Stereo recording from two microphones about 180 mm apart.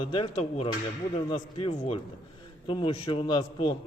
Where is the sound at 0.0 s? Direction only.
30° left (ahead or behind).